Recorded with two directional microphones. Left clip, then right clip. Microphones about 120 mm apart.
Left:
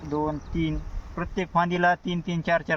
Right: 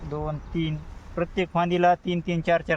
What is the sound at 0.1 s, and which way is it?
Speech, 50° right (ahead or behind).